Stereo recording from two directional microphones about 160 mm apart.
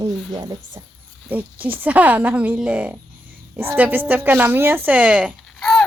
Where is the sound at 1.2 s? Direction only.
10° right (ahead or behind).